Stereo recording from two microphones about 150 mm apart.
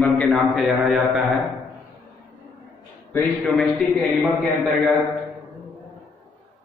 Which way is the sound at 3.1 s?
5° left (ahead or behind).